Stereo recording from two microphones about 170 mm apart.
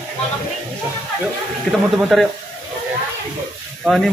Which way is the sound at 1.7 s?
5° left (ahead or behind).